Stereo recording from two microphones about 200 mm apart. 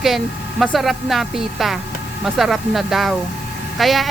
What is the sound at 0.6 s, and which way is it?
A woman's voice, centre (ahead or behind).